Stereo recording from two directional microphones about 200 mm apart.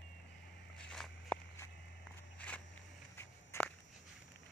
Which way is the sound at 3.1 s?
10° left (ahead or behind).